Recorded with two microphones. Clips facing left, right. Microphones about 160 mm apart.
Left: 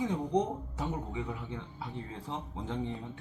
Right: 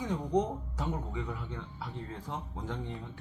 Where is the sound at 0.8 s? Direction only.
20° left (ahead or behind).